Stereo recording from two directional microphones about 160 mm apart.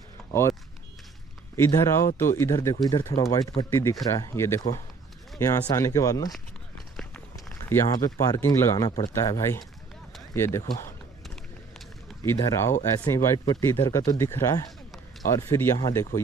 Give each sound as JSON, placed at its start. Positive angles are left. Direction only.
{"t": 0.3, "sound": "speech", "side_deg": 15}
{"t": 1.6, "sound": "speech", "side_deg": 15}
{"t": 7.3, "sound": "speech", "side_deg": 20}
{"t": 12.2, "sound": "speech", "side_deg": 20}